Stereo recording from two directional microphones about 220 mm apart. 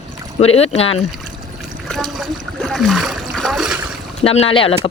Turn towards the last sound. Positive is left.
turn(degrees=25)  # may be behind; listen again after turning